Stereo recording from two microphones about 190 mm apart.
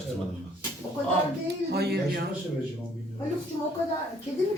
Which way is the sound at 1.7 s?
55° right (ahead or behind).